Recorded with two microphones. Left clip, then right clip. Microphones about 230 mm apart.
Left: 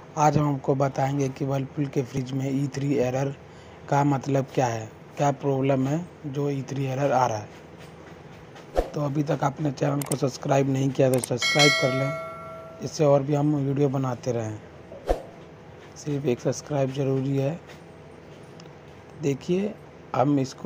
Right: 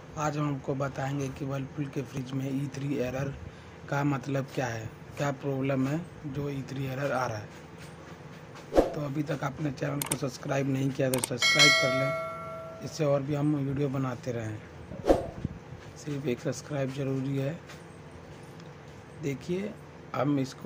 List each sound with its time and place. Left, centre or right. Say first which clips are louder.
0.1 s speech: left 10 dB; centre
8.9 s speech: left 6 dB; centre
11.3 s speech: right 1 dB; centre
12.8 s speech: left 8 dB; centre
15.1 s a sound: right 3 dB; centre
16.0 s speech: left 7 dB; centre
19.2 s speech: left 8 dB; centre